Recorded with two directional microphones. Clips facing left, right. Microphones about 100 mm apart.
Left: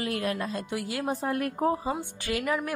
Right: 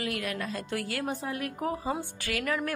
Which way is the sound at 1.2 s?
50° left (ahead or behind).